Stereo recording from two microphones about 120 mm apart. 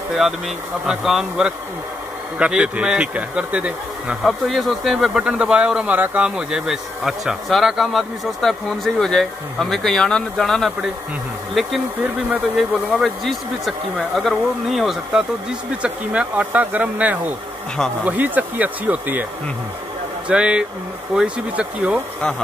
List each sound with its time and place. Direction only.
0.8 s speech: 5° right (ahead or behind)
20.2 s speech: 10° right (ahead or behind)